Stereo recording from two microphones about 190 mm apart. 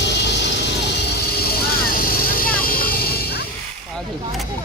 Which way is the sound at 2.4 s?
50° left (ahead or behind).